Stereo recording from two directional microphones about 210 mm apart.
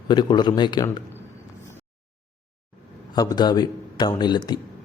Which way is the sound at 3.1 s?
20° left (ahead or behind).